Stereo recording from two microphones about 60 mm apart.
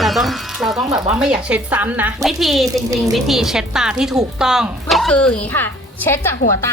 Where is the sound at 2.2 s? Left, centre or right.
Centre.